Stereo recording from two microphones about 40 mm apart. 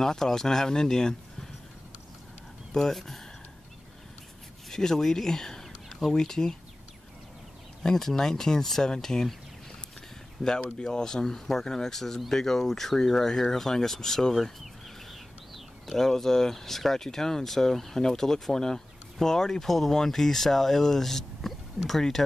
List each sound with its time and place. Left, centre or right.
0.0 s speech: centre
2.7 s speech: centre
4.6 s speech: centre
7.8 s speech: centre
10.4 s speech: centre
15.5 s speech: centre